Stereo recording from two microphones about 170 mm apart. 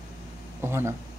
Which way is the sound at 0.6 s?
15° right (ahead or behind).